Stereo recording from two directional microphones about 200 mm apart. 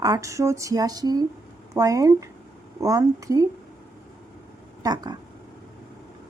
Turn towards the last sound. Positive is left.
turn(degrees=-20)  # may be behind; listen again after turning